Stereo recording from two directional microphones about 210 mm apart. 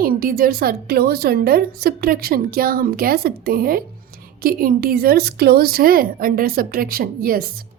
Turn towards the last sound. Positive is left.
turn(degrees=-45)  # may be behind; listen again after turning